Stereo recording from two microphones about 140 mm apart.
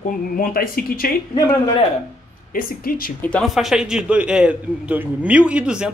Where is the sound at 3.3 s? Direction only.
5° left (ahead or behind).